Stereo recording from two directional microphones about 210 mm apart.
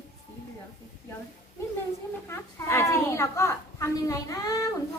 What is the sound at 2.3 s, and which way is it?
A child's voice, 10° left (ahead or behind).